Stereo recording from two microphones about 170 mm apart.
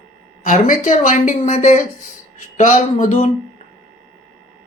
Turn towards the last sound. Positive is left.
turn(degrees=40)  # may be behind; listen again after turning